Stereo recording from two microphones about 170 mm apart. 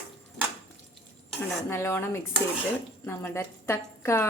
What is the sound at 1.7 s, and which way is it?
Speech, 15° left (ahead or behind).